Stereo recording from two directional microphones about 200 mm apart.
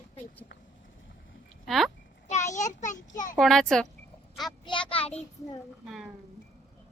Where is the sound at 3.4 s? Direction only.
Centre (ahead or behind).